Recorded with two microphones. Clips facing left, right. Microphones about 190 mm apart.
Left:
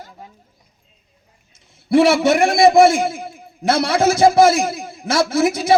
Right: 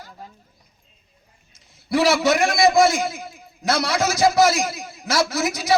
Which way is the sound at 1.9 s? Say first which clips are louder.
Left 6 dB; 25° left (ahead or behind).